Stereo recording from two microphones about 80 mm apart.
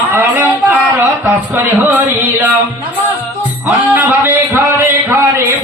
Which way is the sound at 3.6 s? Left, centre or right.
Right.